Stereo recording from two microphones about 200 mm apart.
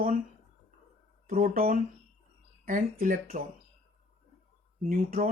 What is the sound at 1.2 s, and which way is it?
Speech, 45° right (ahead or behind).